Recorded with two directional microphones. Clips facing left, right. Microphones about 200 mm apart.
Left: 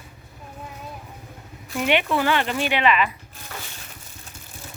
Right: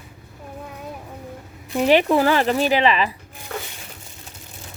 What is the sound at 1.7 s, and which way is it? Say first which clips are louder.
Speech: right 6 dB; 35° right (ahead or behind).